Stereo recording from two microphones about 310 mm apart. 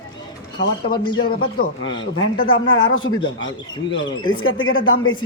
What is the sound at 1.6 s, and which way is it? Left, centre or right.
Speech, left.